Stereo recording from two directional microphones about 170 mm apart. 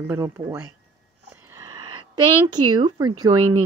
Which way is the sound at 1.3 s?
15° right (ahead or behind).